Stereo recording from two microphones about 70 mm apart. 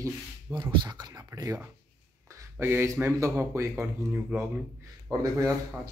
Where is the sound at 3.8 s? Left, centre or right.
Right.